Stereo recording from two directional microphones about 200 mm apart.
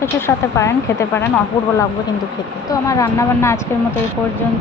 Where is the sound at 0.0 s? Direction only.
15° left (ahead or behind).